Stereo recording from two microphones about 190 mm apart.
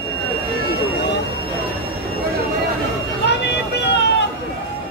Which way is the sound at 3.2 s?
60° left (ahead or behind).